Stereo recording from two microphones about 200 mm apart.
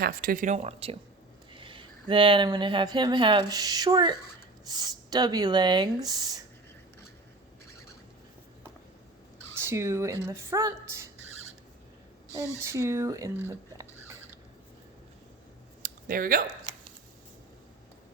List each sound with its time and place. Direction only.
0.0 s speech: 45° right (ahead or behind); by 6.4 s 20° right (ahead or behind)
9.6 s speech: 15° right (ahead or behind)
12.6 s speech: 15° right (ahead or behind)
15.8 s a sound: 45° right (ahead or behind)